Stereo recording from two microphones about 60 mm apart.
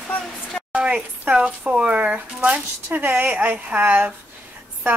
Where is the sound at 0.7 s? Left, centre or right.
Centre.